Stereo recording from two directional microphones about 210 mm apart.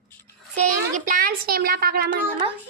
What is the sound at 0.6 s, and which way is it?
Speech, 40° right (ahead or behind).